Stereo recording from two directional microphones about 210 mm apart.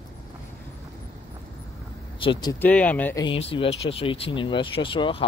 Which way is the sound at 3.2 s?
25° left (ahead or behind).